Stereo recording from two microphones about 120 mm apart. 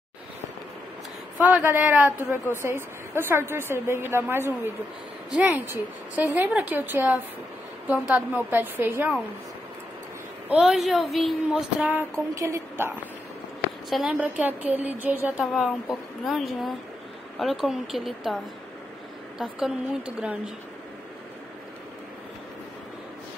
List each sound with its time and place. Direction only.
1.4 s a woman's voice: 15° right (ahead or behind)
5.7 s a woman's voice: 15° right (ahead or behind)
10.5 s a woman's voice: 5° right (ahead or behind)
12.4 s a woman's voice: 25° right (ahead or behind)
13.8 s a woman's voice: 5° right (ahead or behind)
15.4 s a woman's voice: centre (ahead or behind)